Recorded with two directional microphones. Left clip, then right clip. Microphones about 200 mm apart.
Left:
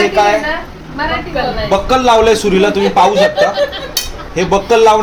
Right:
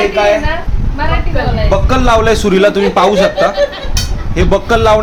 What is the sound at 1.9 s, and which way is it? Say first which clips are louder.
A man's voice: left 2 dB; 15° right (ahead or behind).